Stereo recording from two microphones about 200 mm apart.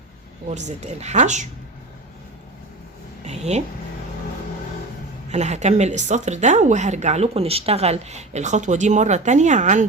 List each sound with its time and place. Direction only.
0.4 s speech: 35° right (ahead or behind)
3.2 s a sound: 35° right (ahead or behind)
5.3 s speech: 35° right (ahead or behind)